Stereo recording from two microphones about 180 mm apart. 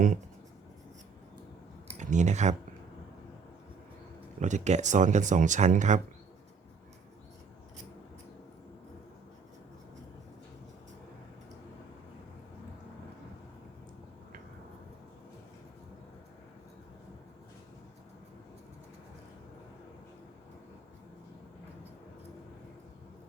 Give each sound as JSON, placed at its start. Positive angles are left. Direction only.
{"t": 1.9, "sound": "speech", "side_deg": -40}
{"t": 4.4, "sound": "speech", "side_deg": -40}